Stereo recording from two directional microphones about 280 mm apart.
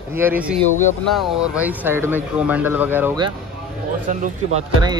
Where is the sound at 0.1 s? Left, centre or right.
Centre.